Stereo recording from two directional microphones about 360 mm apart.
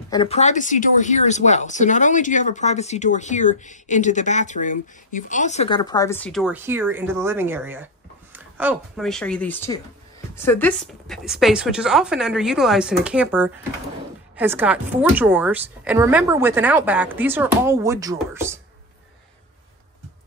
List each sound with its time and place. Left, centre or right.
0.1 s a woman's voice: centre